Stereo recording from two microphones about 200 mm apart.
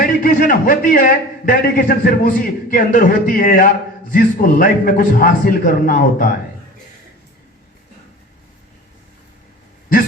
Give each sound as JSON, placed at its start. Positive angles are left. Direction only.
{"t": 0.0, "sound": "a man's voice", "side_deg": 45}